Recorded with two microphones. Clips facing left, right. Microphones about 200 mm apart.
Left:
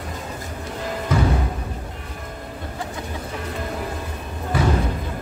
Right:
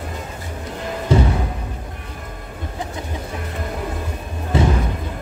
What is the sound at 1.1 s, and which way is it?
Music, 30° right (ahead or behind).